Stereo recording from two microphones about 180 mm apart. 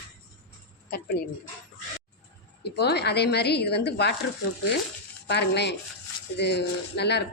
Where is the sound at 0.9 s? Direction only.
60° left (ahead or behind).